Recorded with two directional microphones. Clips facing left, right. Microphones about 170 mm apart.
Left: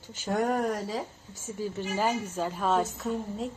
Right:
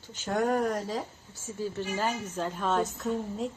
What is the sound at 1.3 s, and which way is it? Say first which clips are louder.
A woman's voice: right 1 dB; 15° left (ahead or behind).